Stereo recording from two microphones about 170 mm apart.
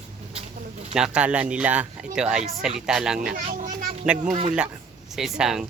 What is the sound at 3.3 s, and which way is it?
Children playing, 45° right (ahead or behind).